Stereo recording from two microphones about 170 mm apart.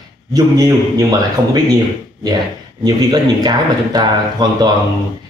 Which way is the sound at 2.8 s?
25° right (ahead or behind).